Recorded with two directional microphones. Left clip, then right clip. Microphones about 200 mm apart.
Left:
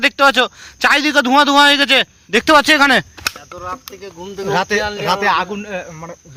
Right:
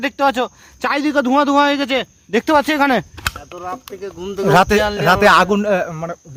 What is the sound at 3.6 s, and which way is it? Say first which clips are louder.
Speech: right 1 dB; 40° right (ahead or behind).